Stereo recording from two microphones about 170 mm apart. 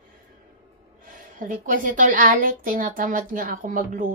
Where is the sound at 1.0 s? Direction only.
50° right (ahead or behind).